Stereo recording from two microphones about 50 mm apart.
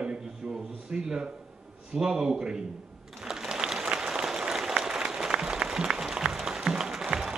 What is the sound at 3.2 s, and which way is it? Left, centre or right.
Applause, centre.